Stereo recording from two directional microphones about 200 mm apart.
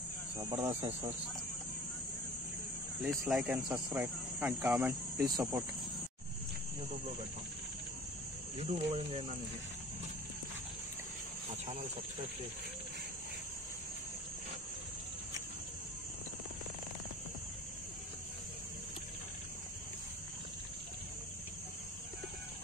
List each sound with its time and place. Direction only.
0.4 s speech: 20° right (ahead or behind)
3.0 s speech: centre (ahead or behind)
3.6 s cricket: 10° right (ahead or behind)
5.3 s speech: 15° right (ahead or behind)
8.5 s speech: 30° right (ahead or behind)